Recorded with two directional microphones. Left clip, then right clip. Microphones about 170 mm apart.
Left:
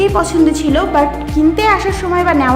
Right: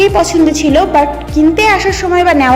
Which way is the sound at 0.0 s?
10° right (ahead or behind).